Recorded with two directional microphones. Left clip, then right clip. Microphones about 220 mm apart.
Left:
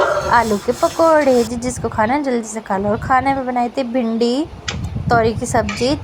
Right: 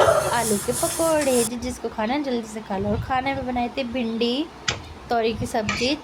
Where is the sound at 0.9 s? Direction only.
20° left (ahead or behind).